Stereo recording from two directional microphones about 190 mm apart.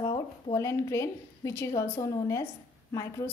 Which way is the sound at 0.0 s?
20° left (ahead or behind).